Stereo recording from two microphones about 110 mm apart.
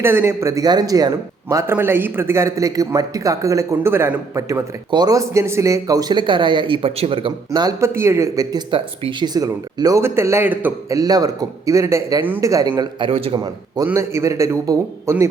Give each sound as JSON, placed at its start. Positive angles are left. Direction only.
{"t": 0.0, "sound": "speech", "side_deg": -20}
{"t": 1.7, "sound": "speech", "side_deg": -20}
{"t": 4.9, "sound": "a man's voice", "side_deg": -40}
{"t": 7.5, "sound": "speech", "side_deg": -40}
{"t": 7.8, "sound": "speech", "side_deg": -25}
{"t": 8.5, "sound": "speech", "side_deg": -45}
{"t": 10.0, "sound": "speech", "side_deg": -25}
{"t": 10.8, "sound": "speech", "side_deg": -30}
{"t": 13.1, "sound": "a man's voice", "side_deg": -60}
{"t": 13.3, "sound": "speech", "side_deg": -40}
{"t": 13.8, "sound": "speech", "side_deg": -25}